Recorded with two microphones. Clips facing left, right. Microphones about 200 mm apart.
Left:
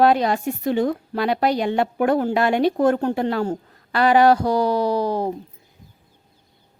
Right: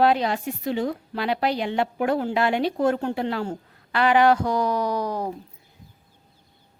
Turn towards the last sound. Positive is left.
turn(degrees=30)  # may be behind; listen again after turning